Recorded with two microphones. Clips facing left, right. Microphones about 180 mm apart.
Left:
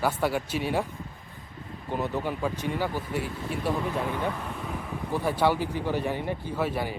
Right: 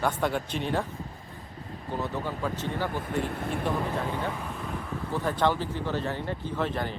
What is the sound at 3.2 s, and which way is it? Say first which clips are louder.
Speech: right 2 dB; 60° right (ahead or behind).